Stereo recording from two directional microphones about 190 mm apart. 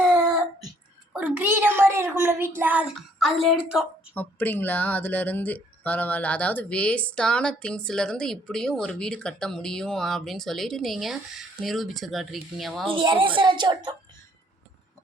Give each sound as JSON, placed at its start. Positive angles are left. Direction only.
{"t": 1.1, "sound": "a woman's voice", "side_deg": -10}
{"t": 4.1, "sound": "speech", "side_deg": 10}
{"t": 12.9, "sound": "a woman's voice", "side_deg": -25}